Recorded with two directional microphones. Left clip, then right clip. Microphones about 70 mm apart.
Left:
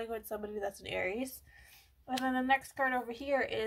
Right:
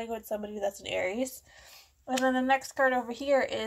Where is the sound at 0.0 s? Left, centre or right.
Right.